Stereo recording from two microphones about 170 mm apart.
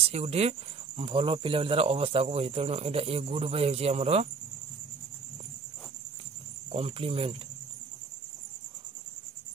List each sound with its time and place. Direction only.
0.0 s speech: 35° right (ahead or behind)
6.7 s speech: 35° right (ahead or behind)